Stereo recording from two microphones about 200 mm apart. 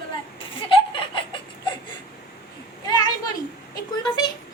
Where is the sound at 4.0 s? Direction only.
20° left (ahead or behind).